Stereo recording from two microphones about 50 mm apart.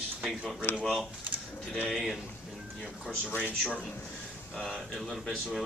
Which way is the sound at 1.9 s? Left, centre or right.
Centre.